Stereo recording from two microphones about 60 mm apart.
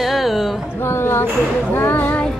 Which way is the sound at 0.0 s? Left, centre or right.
Centre.